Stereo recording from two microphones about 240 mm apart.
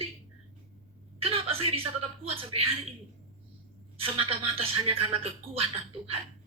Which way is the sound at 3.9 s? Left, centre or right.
Right.